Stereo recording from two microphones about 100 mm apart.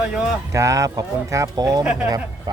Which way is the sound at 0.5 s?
30° right (ahead or behind).